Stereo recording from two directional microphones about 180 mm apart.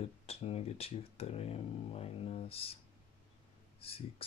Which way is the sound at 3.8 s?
30° left (ahead or behind).